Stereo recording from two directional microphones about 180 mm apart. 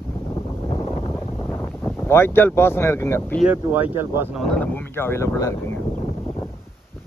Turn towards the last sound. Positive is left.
turn(degrees=15)  # may be behind; listen again after turning